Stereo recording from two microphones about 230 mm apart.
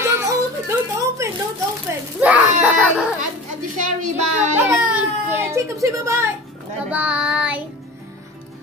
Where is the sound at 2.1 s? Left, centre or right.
Centre.